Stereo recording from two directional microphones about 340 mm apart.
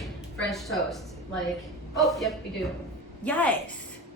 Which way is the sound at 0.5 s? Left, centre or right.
Centre.